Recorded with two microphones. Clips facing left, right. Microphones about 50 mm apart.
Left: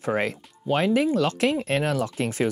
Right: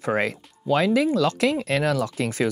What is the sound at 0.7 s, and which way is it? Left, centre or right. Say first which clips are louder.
Speech: right 2 dB; right.